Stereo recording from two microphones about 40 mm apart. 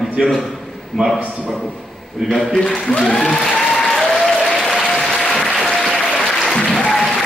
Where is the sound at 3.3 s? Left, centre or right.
Centre.